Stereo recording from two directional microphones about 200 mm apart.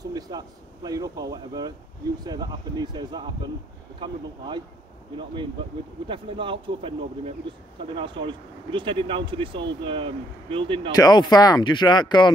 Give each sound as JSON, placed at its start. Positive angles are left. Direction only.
{"t": 0.0, "sound": "speech", "side_deg": -20}
{"t": 11.0, "sound": "speech", "side_deg": 20}